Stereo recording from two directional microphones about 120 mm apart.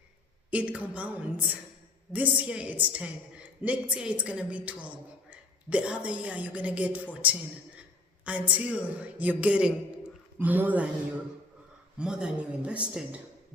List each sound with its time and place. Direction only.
0.5 s a woman's voice: 10° right (ahead or behind)
11.9 s a woman's voice: 5° right (ahead or behind)